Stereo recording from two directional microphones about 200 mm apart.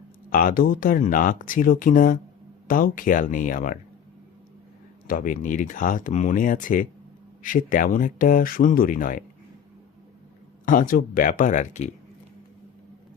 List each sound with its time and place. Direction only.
0.3 s speech: 45° left (ahead or behind)
5.0 s speech: 45° left (ahead or behind)
10.7 s speech: 45° left (ahead or behind)